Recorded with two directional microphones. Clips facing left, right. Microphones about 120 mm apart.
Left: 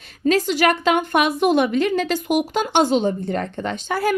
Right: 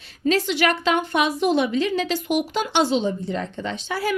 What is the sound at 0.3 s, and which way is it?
A woman's voice, 45° left (ahead or behind).